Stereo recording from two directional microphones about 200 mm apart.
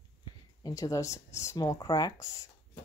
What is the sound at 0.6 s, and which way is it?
Speech, 15° left (ahead or behind).